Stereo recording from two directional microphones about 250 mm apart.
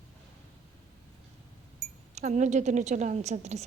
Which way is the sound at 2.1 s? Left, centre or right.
Right.